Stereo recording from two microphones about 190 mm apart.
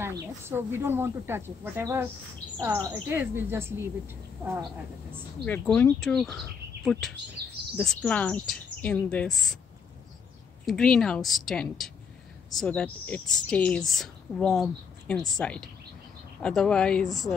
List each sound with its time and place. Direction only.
0.0 s speech: 15° right (ahead or behind)
5.4 s a woman's voice: 5° left (ahead or behind)
7.4 s speech: 55° right (ahead or behind)
7.7 s a woman's voice: 5° left (ahead or behind)
10.6 s a woman's voice: centre (ahead or behind)